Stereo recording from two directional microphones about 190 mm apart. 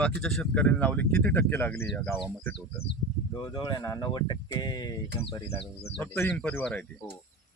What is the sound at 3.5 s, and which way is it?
Speech, 20° left (ahead or behind).